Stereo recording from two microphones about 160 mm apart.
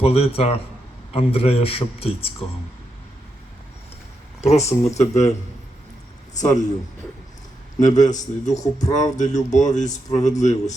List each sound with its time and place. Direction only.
0.0 s a man's voice: 40° left (ahead or behind)
4.4 s speech: 45° left (ahead or behind)
6.3 s speech: 50° left (ahead or behind)
7.8 s speech: 50° left (ahead or behind)